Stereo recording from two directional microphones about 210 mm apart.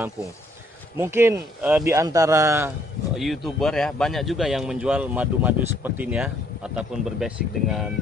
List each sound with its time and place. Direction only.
0.9 s speech: 10° right (ahead or behind)
3.2 s a man's voice: centre (ahead or behind)